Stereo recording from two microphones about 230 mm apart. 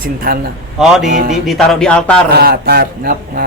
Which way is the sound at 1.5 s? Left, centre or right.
Centre.